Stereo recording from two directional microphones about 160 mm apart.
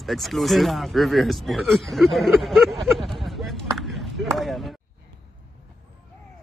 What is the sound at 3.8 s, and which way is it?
Basketball bounce, centre (ahead or behind).